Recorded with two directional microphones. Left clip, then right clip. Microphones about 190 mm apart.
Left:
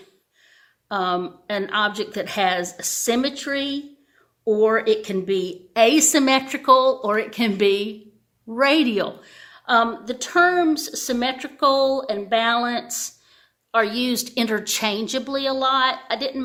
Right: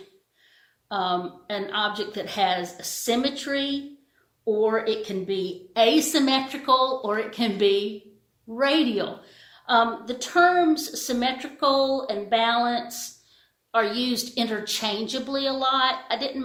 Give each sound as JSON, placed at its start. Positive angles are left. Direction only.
{"t": 0.9, "sound": "a woman's voice", "side_deg": 50}